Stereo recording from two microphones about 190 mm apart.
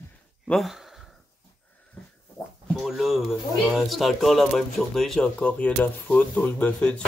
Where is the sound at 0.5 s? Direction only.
Centre (ahead or behind).